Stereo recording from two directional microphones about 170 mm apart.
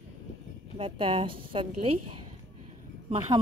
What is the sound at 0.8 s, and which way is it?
A woman's voice, 30° right (ahead or behind).